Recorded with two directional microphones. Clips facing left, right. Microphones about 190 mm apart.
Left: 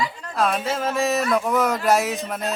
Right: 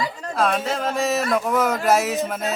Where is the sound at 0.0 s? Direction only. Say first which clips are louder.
Right 1 dB; 40° right (ahead or behind).